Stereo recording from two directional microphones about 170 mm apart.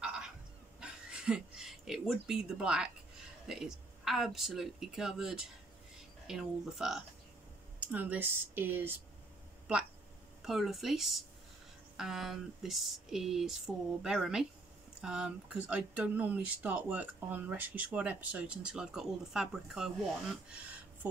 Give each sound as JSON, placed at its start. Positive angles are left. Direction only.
{"t": 0.0, "sound": "a sound", "side_deg": -5}
{"t": 0.7, "sound": "speech", "side_deg": -5}
{"t": 10.4, "sound": "speech", "side_deg": 0}